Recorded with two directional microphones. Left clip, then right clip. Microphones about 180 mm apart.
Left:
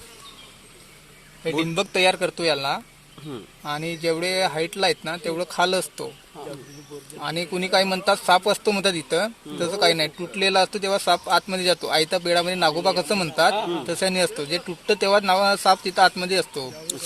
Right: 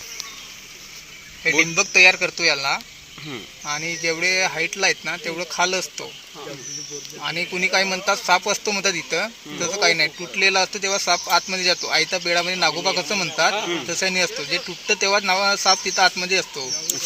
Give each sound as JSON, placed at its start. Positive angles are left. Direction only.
{"t": 1.7, "sound": "speech", "side_deg": 65}
{"t": 7.2, "sound": "speech", "side_deg": 65}
{"t": 13.6, "sound": "speech", "side_deg": 0}
{"t": 13.8, "sound": "speech", "side_deg": 75}